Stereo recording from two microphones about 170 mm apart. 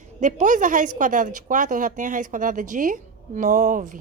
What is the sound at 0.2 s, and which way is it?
Speech, 45° right (ahead or behind).